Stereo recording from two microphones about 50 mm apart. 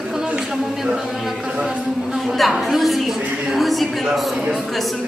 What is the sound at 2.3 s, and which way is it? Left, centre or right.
Speech, centre.